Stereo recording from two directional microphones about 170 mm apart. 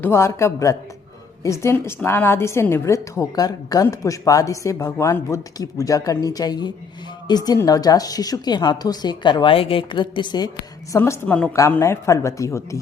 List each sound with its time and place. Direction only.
0.0 s a woman's voice: 15° left (ahead or behind)